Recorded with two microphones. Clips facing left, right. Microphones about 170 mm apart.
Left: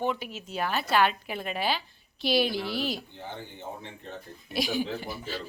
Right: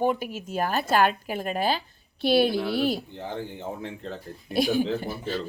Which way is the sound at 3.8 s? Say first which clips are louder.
Right 8 dB; 90° right.